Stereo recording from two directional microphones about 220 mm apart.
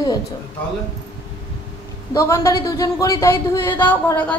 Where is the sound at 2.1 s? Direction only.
15° left (ahead or behind).